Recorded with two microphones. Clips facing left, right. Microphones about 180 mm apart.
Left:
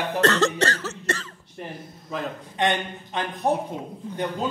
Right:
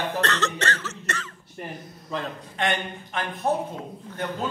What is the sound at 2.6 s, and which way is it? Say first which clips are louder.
Speech: left 3 dB; 20° left (ahead or behind).